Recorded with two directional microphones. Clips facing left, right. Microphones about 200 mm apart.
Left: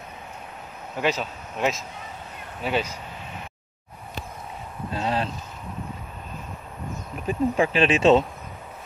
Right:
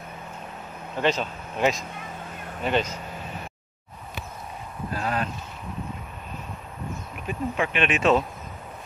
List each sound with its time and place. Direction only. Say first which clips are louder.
0.9 s speech: right 1 dB; 10° left (ahead or behind)
4.9 s speech: left 2 dB; 25° left (ahead or behind)
7.2 s speech: left 5 dB; 35° left (ahead or behind)